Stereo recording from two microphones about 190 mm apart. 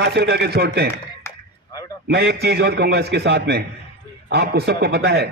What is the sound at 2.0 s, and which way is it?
A man's voice, 60° right (ahead or behind).